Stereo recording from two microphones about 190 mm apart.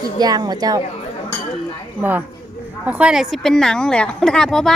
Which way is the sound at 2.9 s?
5° right (ahead or behind).